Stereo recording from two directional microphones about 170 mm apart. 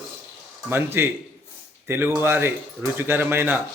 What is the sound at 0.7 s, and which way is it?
Speech, 15° right (ahead or behind).